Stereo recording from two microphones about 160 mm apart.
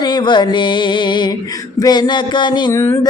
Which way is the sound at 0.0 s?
25° left (ahead or behind).